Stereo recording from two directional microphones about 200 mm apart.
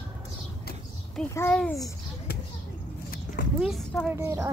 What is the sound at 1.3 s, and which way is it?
Speech, 10° left (ahead or behind).